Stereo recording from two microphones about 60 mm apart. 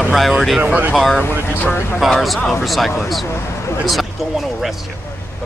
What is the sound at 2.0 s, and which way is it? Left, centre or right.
Speech, centre.